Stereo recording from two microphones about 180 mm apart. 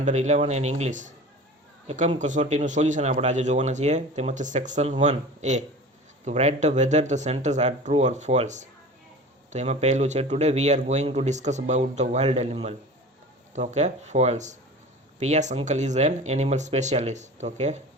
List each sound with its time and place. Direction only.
0.0 s speech: 40° right (ahead or behind)